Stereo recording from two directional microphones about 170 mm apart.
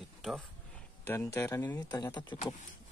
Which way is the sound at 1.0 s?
15° left (ahead or behind).